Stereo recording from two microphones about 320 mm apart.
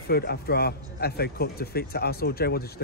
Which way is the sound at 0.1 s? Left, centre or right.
Left.